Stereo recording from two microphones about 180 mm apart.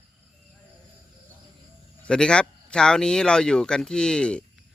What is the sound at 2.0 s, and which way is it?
Speech, 5° left (ahead or behind).